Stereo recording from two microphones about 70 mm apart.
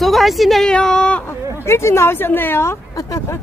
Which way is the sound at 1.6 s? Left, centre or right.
Left.